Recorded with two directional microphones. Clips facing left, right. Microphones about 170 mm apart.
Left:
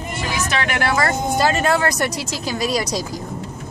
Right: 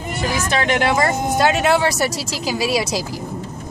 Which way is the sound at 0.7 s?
20° right (ahead or behind).